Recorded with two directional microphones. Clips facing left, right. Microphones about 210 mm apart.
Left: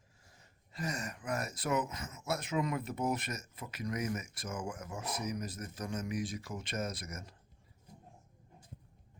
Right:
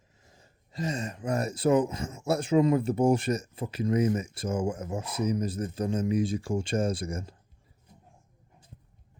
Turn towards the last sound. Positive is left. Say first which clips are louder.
# right 10 dB
turn(degrees=-30)  # may be behind; listen again after turning